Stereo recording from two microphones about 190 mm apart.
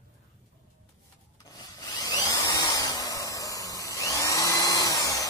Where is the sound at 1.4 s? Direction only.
20° left (ahead or behind).